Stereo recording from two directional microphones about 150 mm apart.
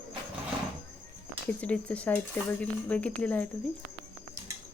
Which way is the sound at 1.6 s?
10° left (ahead or behind).